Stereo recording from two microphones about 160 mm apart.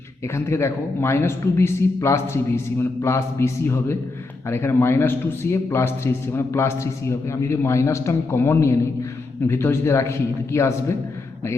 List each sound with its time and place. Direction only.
0.3 s a man's voice: 15° left (ahead or behind)